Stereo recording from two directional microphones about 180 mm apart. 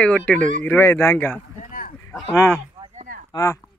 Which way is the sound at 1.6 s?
50° left (ahead or behind).